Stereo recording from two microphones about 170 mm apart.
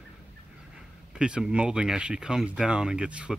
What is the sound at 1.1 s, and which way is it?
Speech, 5° right (ahead or behind).